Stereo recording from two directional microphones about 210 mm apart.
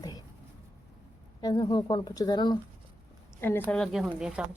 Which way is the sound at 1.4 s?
20° left (ahead or behind).